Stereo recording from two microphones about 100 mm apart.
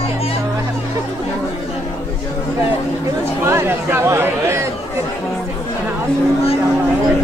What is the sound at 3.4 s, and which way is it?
Chatter, 25° right (ahead or behind).